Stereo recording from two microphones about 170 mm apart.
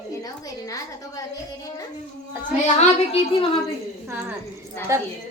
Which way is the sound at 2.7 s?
35° left (ahead or behind).